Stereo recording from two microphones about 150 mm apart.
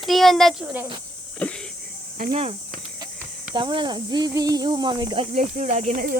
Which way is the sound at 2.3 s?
40° right (ahead or behind).